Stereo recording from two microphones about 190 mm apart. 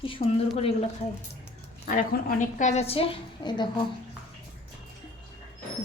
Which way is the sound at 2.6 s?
35° left (ahead or behind).